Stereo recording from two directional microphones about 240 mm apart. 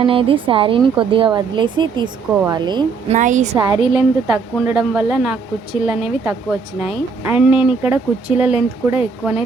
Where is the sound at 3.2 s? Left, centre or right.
Right.